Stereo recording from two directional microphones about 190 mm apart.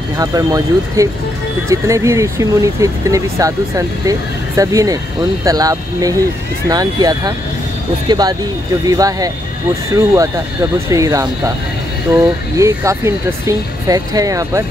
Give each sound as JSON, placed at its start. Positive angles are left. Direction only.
{"t": 0.2, "sound": "speech", "side_deg": -20}